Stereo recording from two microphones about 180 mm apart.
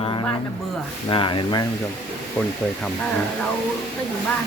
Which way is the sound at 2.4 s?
5° left (ahead or behind).